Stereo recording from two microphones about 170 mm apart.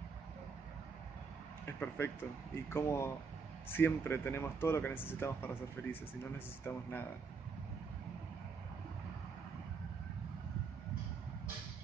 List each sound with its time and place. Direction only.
1.7 s speech: 15° left (ahead or behind)